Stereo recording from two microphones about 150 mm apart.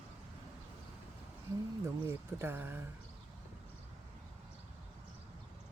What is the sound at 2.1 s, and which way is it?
Speech, 15° right (ahead or behind).